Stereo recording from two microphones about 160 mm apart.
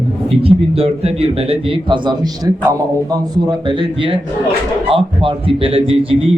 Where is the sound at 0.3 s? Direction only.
40° right (ahead or behind).